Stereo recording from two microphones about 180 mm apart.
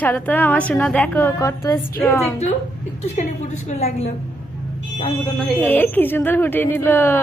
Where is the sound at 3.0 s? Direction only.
40° left (ahead or behind).